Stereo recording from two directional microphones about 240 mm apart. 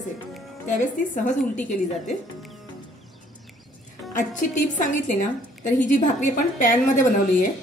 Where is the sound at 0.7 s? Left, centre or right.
Left.